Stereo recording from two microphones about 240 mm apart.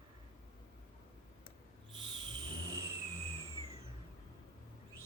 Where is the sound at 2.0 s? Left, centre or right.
Centre.